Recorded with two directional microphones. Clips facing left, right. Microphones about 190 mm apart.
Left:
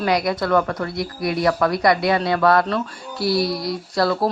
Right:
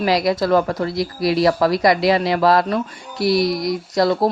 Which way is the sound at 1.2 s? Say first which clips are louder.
Right 5 dB; 90° right.